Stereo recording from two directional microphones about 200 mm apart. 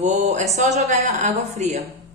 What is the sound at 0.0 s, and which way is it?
A woman's voice, 35° right (ahead or behind).